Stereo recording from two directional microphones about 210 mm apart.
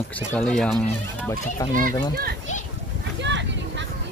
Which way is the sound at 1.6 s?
15° left (ahead or behind).